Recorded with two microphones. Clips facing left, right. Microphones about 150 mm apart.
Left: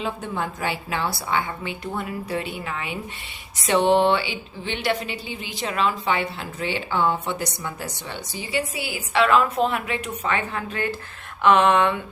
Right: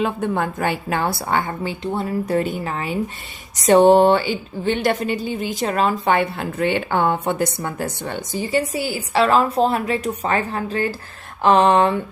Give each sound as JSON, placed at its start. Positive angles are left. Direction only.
{"t": 0.0, "sound": "speech", "side_deg": -55}
{"t": 1.8, "sound": "speech", "side_deg": -30}
{"t": 2.2, "sound": "speech", "side_deg": -45}